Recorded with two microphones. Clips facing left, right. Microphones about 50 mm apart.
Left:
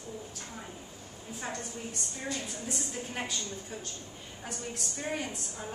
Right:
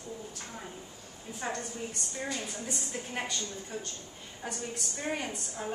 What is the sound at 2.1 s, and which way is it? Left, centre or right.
Speech, centre.